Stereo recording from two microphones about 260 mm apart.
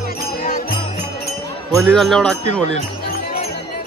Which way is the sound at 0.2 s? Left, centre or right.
Left.